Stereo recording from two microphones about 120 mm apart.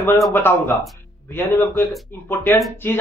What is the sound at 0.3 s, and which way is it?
Speech, 20° left (ahead or behind).